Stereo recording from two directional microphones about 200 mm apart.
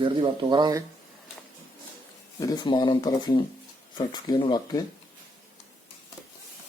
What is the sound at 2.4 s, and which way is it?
Speech, 20° left (ahead or behind).